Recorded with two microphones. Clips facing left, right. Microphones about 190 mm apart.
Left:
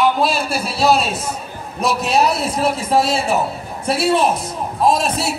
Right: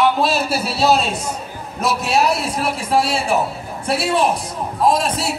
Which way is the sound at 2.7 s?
20° left (ahead or behind).